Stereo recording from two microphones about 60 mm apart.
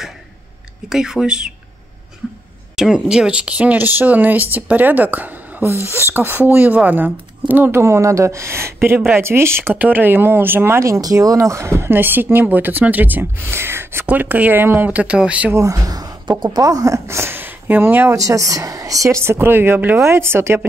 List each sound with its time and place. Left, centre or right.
0.8 s speech: centre
2.7 s speech: centre; by 5.7 s right
5.7 s speech: right
7.8 s speech: right
9.8 s speech: right
10.8 s speech: right
14.0 s speech: right
14.9 s speech: right
15.5 s a woman's voice: right
18.1 s a woman's voice: right
19.3 s speech: right